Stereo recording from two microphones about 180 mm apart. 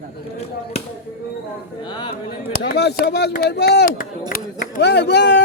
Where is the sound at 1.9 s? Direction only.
25° left (ahead or behind).